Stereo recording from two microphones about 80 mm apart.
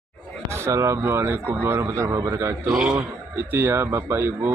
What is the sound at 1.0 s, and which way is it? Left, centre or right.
A man's voice, right.